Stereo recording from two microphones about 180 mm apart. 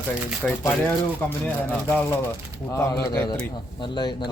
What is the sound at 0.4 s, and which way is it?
Speech, 5° left (ahead or behind).